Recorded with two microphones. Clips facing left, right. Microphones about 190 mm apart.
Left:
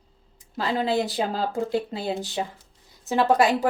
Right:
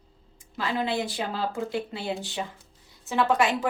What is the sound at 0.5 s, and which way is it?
A woman's voice, 35° left (ahead or behind).